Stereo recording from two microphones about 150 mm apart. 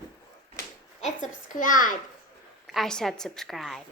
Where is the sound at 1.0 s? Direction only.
60° left (ahead or behind).